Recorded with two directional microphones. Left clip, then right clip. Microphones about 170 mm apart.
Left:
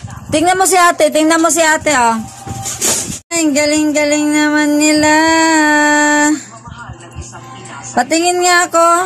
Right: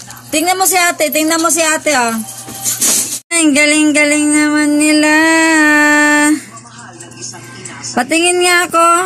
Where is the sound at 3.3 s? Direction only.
Centre (ahead or behind).